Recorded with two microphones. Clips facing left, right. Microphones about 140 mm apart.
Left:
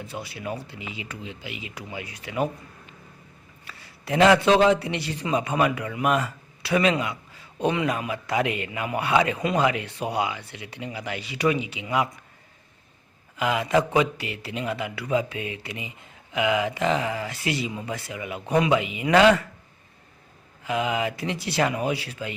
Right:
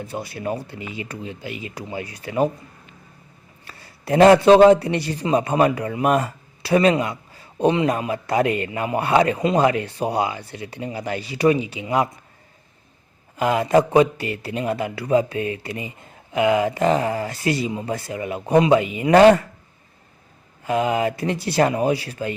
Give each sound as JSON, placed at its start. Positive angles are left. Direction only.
{"t": 0.0, "sound": "speech", "side_deg": -45}
{"t": 3.7, "sound": "a man's voice", "side_deg": -40}
{"t": 13.3, "sound": "a man's voice", "side_deg": -40}
{"t": 20.7, "sound": "a man's voice", "side_deg": -40}